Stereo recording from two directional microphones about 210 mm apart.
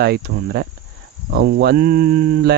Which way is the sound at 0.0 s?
50° right (ahead or behind).